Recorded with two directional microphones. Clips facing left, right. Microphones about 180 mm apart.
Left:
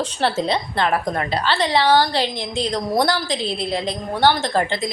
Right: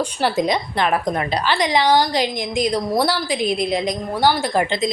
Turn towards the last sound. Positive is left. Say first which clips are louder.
# right 2 dB
turn(degrees=-20)  # may be behind; listen again after turning